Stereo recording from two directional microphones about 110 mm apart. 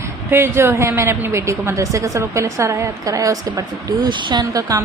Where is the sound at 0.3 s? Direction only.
25° right (ahead or behind); by 4.4 s 45° right (ahead or behind).